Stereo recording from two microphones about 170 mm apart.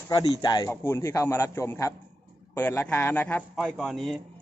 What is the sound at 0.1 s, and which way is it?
A man's voice, 25° left (ahead or behind).